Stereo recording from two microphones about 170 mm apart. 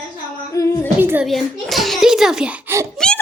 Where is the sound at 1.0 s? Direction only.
10° right (ahead or behind).